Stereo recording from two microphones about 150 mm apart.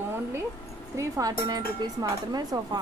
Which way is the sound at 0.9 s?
20° right (ahead or behind).